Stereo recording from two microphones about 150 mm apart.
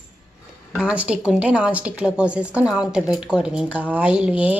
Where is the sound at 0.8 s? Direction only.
5° right (ahead or behind).